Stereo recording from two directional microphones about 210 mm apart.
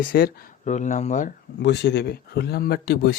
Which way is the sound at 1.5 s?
55° left (ahead or behind).